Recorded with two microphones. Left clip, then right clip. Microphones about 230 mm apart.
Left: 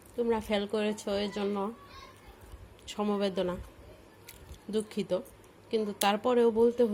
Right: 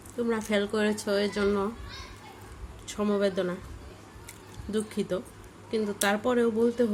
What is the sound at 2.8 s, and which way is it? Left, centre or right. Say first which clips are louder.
Speech: right 4 dB; centre.